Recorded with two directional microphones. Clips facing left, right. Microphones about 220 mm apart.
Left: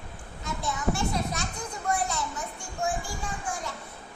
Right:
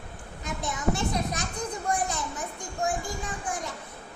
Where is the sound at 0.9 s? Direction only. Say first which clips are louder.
Right 1 dB; 20° right (ahead or behind).